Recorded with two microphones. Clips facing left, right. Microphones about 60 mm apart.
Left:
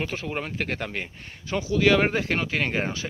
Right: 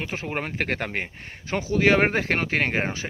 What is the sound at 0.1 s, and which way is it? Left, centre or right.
Speech, right.